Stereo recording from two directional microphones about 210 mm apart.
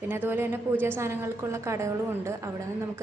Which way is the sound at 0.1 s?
10° right (ahead or behind).